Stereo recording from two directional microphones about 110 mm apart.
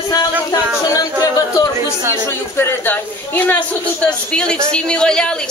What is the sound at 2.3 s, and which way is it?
A woman's voice, 20° left (ahead or behind).